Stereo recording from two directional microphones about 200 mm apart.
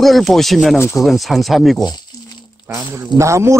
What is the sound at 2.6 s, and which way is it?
Speech, 10° right (ahead or behind).